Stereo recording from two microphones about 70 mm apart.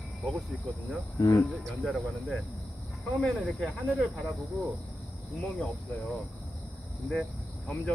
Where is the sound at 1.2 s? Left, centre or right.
Left.